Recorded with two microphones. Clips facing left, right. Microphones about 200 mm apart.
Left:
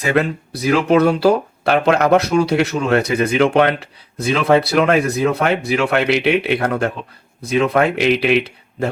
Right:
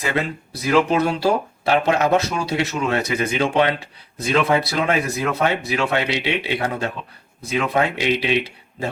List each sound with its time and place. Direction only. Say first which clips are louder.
0.2 s speech: left 7 dB; 60° left (ahead or behind)